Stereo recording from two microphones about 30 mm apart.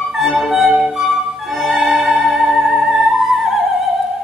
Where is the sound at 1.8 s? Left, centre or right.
Centre.